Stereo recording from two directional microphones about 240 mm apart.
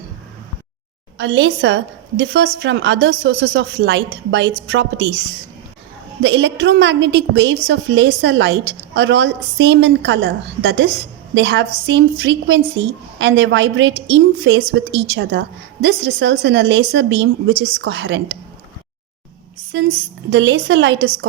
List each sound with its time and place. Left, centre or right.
1.2 s a woman's voice: right
6.2 s a woman's voice: right
19.7 s a woman's voice: right